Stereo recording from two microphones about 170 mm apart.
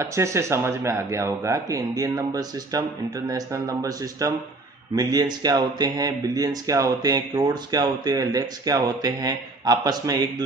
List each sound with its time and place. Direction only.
0.0 s speech: 15° right (ahead or behind)